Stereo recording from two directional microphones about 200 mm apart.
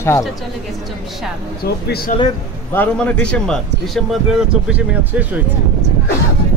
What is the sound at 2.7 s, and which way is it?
A man's voice, 5° left (ahead or behind).